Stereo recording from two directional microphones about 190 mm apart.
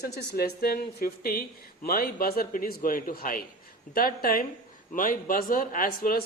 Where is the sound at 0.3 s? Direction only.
55° left (ahead or behind).